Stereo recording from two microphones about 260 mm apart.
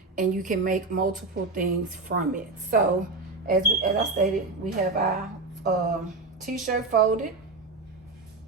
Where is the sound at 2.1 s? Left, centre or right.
Right.